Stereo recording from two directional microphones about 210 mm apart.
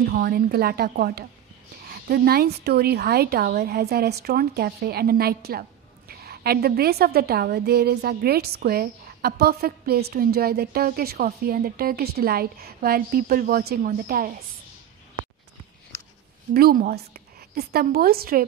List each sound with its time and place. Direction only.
0.0 s a woman's voice: 45° right (ahead or behind)
16.5 s a woman's voice: 45° right (ahead or behind)